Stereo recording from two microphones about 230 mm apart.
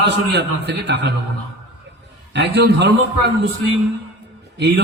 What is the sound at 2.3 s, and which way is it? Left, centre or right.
A man's voice, right.